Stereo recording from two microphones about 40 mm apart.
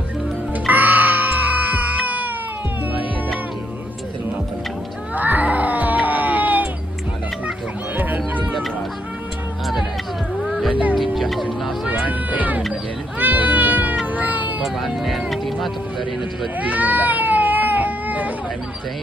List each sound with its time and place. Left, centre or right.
0.7 s music: right
5.1 s cat: right
7.9 s music: right
10.4 s music: centre
10.7 s music: right
11.0 s music: centre
11.9 s cat: right
14.6 s music: centre
16.5 s baby cry: right